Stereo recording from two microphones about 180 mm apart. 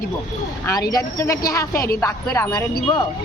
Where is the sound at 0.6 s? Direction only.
20° left (ahead or behind).